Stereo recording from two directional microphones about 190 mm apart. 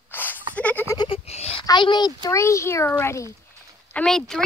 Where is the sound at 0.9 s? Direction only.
30° left (ahead or behind).